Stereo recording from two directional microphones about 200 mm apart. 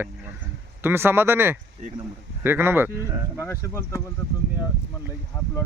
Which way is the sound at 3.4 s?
10° left (ahead or behind).